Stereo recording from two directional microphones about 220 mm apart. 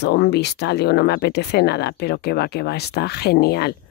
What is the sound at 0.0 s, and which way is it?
Speech, 50° left (ahead or behind).